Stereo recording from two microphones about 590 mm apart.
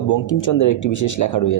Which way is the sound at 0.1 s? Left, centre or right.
Left.